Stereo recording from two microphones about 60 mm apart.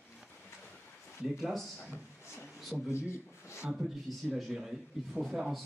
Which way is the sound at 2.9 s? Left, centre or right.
Left.